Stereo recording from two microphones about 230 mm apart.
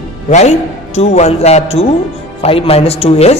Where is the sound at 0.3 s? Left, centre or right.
Left.